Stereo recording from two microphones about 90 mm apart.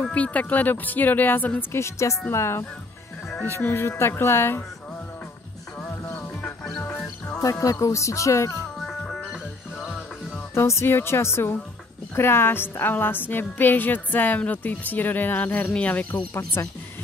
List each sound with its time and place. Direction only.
0.0 s a woman's voice: 15° left (ahead or behind)
6.1 s music: 15° left (ahead or behind)
7.3 s speech: 40° left (ahead or behind)
8.7 s music: centre (ahead or behind)
10.5 s a woman's voice: 30° left (ahead or behind)
16.6 s speech: 30° left (ahead or behind)